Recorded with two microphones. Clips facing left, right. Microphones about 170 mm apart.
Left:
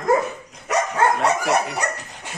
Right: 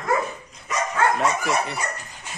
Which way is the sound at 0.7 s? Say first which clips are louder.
Left 5 dB; 70° left (ahead or behind).